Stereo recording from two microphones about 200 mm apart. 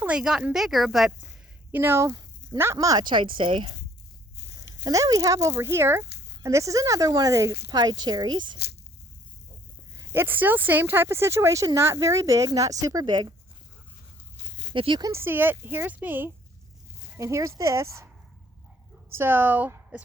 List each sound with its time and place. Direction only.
0.0 s speech: 5° right (ahead or behind); by 3.8 s 25° right (ahead or behind)
4.9 s speech: 20° right (ahead or behind)
6.1 s a sound: 55° left (ahead or behind)
6.4 s speech: 15° right (ahead or behind)
9.9 s speech: 15° right (ahead or behind)
14.7 s speech: 25° right (ahead or behind)
19.1 s speech: 10° right (ahead or behind)